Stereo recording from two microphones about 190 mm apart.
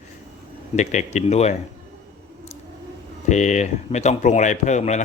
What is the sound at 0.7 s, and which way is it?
Speech, 40° left (ahead or behind).